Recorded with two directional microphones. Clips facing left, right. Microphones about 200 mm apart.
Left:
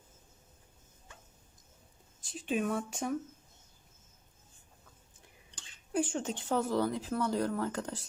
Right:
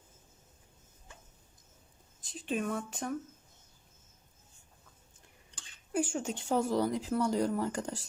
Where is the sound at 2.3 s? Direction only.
Centre (ahead or behind).